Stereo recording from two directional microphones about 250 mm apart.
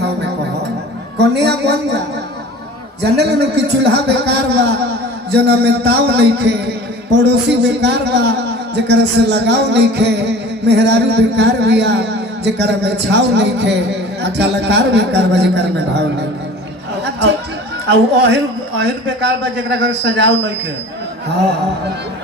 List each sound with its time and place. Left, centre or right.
1.2 s a woman's voice: right
3.0 s a man's voice: right
17.8 s a man's voice: right
19.9 s a man's voice: right